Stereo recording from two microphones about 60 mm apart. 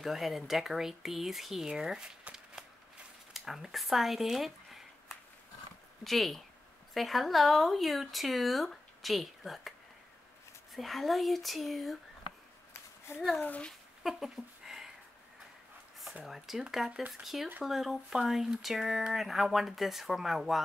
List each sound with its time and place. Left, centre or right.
0.0 s speech: centre
3.3 s speech: centre
13.4 s a child's voice: left
14.0 s a sound: centre
16.3 s speech: centre